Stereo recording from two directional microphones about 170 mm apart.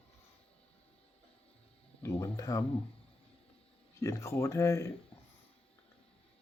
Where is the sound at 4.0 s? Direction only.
15° left (ahead or behind).